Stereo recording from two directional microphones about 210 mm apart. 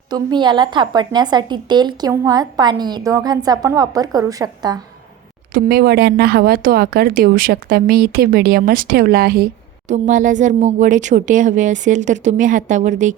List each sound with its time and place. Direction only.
0.1 s a woman's voice: 20° right (ahead or behind)
5.5 s speech: 45° right (ahead or behind)